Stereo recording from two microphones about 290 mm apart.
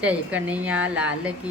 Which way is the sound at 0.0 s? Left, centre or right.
Centre.